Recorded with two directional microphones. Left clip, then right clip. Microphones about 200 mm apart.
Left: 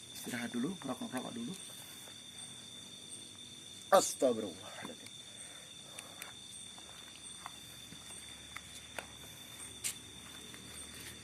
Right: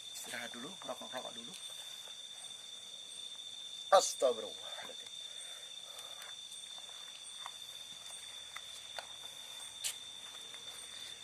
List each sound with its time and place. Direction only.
0.3 s speech: centre (ahead or behind)
3.8 s speech: centre (ahead or behind)